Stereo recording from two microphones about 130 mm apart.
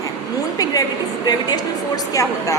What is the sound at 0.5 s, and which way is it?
A woman's voice, 30° left (ahead or behind).